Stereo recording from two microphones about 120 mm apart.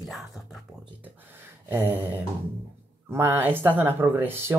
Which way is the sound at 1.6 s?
15° right (ahead or behind).